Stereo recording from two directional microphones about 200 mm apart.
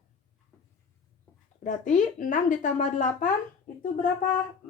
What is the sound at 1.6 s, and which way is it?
Speech, 40° left (ahead or behind).